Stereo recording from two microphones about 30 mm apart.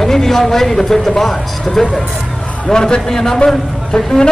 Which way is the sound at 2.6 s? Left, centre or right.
Left.